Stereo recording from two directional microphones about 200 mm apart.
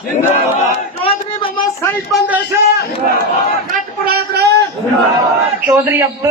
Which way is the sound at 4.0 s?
50° right (ahead or behind).